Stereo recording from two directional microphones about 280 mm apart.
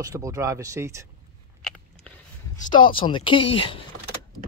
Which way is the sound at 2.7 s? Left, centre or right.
Centre.